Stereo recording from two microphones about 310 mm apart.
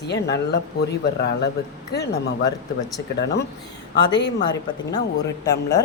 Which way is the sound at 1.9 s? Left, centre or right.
Left.